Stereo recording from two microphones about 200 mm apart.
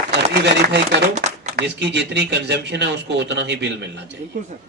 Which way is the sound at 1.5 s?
60° right (ahead or behind).